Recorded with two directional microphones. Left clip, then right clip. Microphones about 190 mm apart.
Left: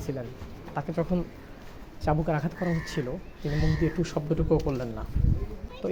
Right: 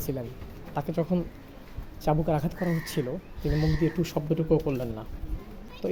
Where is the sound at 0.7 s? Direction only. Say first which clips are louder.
Right 1 dB; 20° right (ahead or behind).